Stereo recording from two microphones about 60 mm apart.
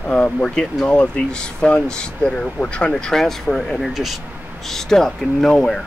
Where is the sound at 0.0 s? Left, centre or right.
Centre.